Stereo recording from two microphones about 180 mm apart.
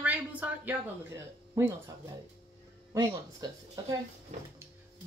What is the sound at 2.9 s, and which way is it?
Speech, 20° right (ahead or behind).